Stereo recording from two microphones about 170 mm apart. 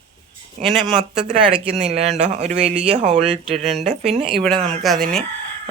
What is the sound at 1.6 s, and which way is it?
Speech, 40° right (ahead or behind).